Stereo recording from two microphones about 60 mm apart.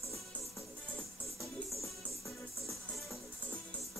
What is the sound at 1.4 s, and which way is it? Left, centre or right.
Music, centre.